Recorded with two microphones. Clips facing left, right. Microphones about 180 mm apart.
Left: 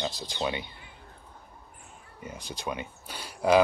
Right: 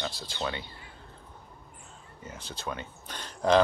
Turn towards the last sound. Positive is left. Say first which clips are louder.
# left 1 dB
turn(degrees=10)  # may be behind; listen again after turning